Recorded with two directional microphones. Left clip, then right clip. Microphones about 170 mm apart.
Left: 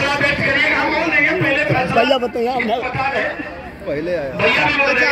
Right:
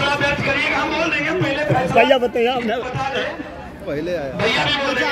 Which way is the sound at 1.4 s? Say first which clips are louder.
Left 2 dB; 30° left (ahead or behind).